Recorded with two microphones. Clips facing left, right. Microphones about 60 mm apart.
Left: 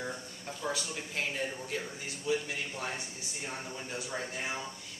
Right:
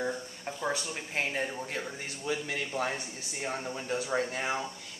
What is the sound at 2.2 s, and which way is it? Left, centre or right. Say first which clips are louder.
Speech: even; right.